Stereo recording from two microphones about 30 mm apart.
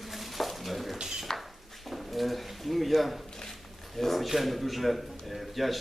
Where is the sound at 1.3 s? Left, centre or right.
Centre.